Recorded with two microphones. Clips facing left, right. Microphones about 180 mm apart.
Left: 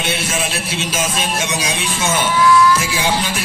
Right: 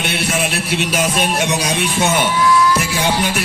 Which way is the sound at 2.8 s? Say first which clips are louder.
Right 2 dB; 60° right (ahead or behind).